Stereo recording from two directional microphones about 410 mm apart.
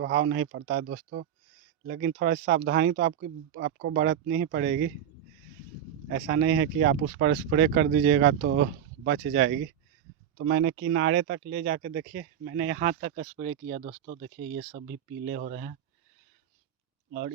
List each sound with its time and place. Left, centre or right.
0.0 s speech: right
6.1 s speech: right